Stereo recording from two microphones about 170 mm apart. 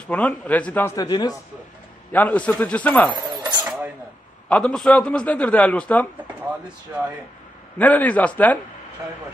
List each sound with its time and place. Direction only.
0.0 s a man's voice: 5° left (ahead or behind)
0.9 s a man's voice: 20° left (ahead or behind)
2.1 s a man's voice: 10° left (ahead or behind)
4.5 s a man's voice: 5° left (ahead or behind)
7.8 s a man's voice: 10° left (ahead or behind)